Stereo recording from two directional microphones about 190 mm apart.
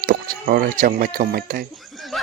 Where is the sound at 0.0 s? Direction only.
45° right (ahead or behind).